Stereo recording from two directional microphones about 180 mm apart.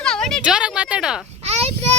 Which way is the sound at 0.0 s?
5° left (ahead or behind).